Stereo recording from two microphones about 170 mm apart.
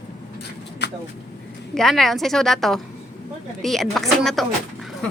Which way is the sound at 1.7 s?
Centre (ahead or behind).